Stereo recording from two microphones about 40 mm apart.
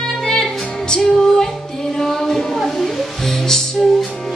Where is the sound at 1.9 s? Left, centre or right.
Centre.